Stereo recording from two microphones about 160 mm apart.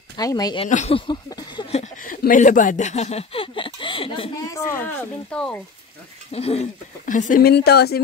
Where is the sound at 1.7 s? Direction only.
50° left (ahead or behind); by 4.3 s 35° left (ahead or behind).